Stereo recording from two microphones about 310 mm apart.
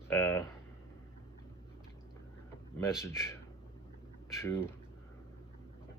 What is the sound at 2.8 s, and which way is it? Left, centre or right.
Speech, centre.